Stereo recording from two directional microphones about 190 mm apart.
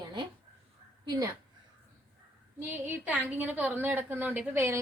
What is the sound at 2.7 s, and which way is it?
A woman's voice, 10° right (ahead or behind).